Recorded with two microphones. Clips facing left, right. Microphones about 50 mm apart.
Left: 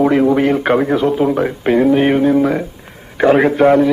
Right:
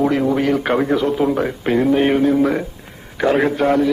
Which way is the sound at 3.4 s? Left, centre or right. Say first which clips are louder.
Left 5 dB; left.